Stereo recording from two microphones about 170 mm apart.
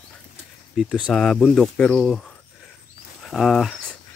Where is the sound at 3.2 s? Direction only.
Centre (ahead or behind).